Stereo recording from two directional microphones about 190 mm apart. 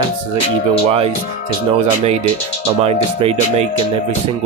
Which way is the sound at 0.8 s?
30° right (ahead or behind).